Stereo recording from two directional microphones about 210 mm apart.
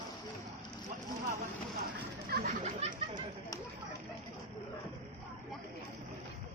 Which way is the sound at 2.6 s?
25° right (ahead or behind).